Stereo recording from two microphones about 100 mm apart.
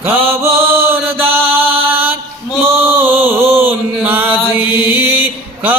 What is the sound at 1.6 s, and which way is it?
Mantra, 70° right (ahead or behind).